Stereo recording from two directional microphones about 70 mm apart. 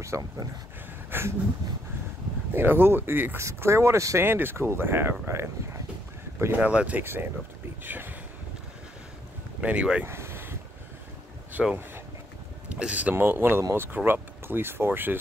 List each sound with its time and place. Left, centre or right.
0.1 s speech: right
2.5 s speech: right
3.3 s speech: right
4.2 s speech: right
6.6 s speech: centre
7.0 s speech: right
9.6 s speech: centre
10.0 s a sound: right
11.6 s speech: centre
12.6 s speech: centre
13.1 s speech: right